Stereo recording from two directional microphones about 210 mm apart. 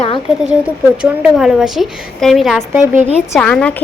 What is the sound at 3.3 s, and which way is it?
Speech, 5° left (ahead or behind).